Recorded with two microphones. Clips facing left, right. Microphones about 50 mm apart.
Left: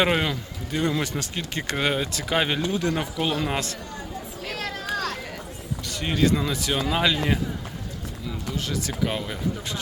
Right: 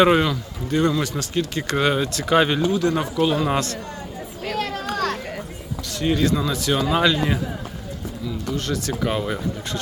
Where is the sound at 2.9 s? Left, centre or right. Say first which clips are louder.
Right 5 dB; centre.